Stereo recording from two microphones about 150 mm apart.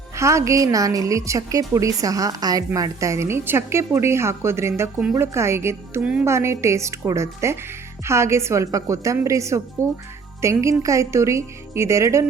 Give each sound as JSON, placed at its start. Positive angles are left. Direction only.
{"t": 0.2, "sound": "a woman's voice", "side_deg": -20}